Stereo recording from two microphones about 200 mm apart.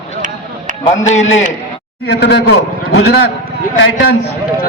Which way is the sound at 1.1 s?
35° left (ahead or behind).